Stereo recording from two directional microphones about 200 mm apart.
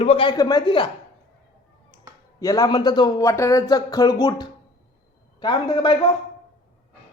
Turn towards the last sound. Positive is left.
turn(degrees=20)  # may be behind; listen again after turning